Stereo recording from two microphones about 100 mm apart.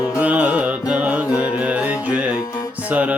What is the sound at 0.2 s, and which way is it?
Music, 15° right (ahead or behind).